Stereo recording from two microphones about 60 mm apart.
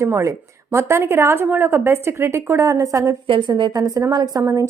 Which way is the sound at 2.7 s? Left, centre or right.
Right.